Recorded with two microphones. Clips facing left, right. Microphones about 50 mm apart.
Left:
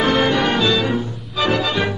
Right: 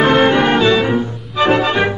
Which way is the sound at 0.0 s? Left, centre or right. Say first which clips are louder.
Right 5 dB; right.